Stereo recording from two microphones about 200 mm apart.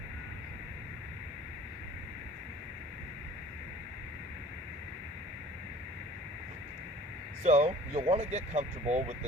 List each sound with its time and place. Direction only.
7.4 s speech: 35° right (ahead or behind)